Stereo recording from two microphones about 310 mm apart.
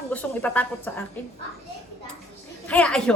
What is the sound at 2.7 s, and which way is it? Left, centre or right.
Speech, centre.